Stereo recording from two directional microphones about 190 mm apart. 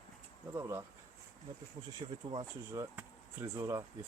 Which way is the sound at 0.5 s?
15° right (ahead or behind).